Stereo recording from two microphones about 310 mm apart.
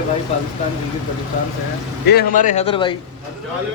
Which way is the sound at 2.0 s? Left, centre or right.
Left.